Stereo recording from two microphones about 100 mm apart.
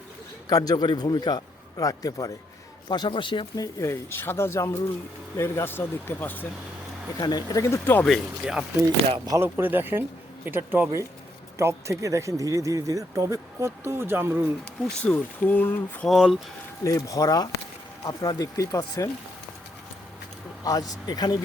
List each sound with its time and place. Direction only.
0.4 s a man's voice: 40° left (ahead or behind)
2.9 s speech: 50° left (ahead or behind)
3.5 s a man's voice: 35° left (ahead or behind)
4.1 s speech: 20° left (ahead or behind)
7.2 s speech: 45° left (ahead or behind)
7.6 s speech: 30° left (ahead or behind)
8.0 s speech: centre (ahead or behind)
9.0 s speech: 65° right (ahead or behind)
9.4 s speech: 20° right (ahead or behind)
15.4 s speech: 20° left (ahead or behind)
16.0 s speech: 5° right (ahead or behind)
16.8 s a man's voice: 35° left (ahead or behind)
20.7 s a man's voice: 35° left (ahead or behind)